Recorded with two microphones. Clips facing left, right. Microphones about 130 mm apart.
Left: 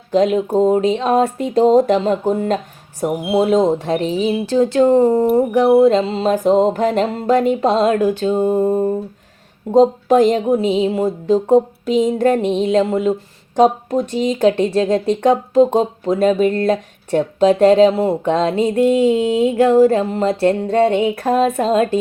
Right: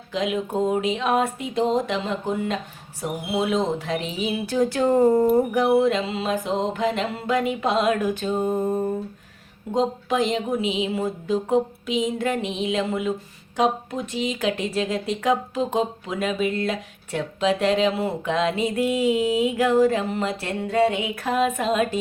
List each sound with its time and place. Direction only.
0.1 s speech: 40° left (ahead or behind)
9.7 s speech: 45° left (ahead or behind)